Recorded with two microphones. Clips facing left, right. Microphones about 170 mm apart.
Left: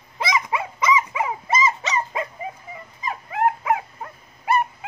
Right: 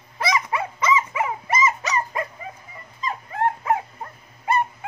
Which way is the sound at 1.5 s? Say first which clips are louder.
Even; 25° left (ahead or behind).